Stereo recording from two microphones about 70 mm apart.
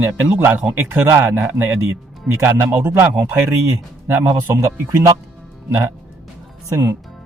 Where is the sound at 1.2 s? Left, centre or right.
Right.